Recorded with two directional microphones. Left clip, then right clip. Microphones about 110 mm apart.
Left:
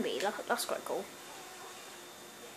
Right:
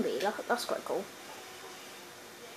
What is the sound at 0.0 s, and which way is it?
Speech, 5° right (ahead or behind).